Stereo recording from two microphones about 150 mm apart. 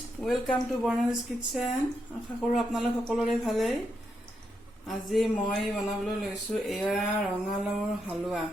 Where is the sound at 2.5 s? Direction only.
Centre (ahead or behind).